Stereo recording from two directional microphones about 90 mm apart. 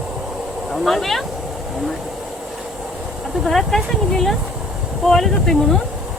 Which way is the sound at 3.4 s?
5° left (ahead or behind).